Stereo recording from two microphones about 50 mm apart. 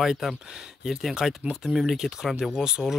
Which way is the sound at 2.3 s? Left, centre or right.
Centre.